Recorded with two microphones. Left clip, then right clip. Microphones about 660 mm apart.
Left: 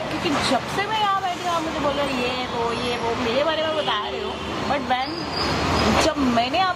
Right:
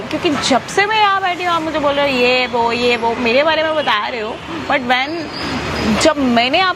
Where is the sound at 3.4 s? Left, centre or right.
Right.